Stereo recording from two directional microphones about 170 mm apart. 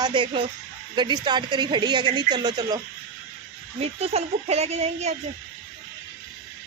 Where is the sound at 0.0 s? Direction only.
30° right (ahead or behind).